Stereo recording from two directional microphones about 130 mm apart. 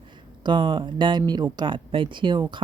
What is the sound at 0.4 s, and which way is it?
A woman's voice, 35° right (ahead or behind).